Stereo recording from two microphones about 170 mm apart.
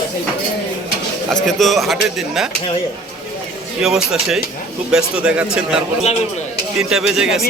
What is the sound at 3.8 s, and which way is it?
A man's voice, centre (ahead or behind).